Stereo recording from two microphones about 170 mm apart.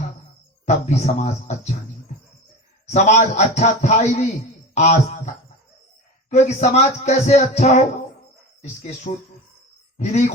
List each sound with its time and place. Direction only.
0.6 s speech: 45° left (ahead or behind)
2.9 s speech: 45° left (ahead or behind)
6.3 s speech: 40° left (ahead or behind)